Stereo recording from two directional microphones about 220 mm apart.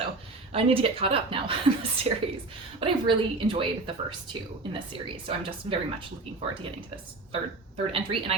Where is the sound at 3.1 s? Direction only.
25° right (ahead or behind).